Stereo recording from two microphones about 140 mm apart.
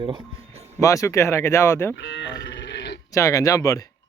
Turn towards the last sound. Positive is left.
turn(degrees=25)  # may be behind; listen again after turning